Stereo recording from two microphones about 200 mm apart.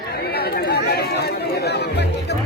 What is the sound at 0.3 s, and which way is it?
Chatter, 50° left (ahead or behind).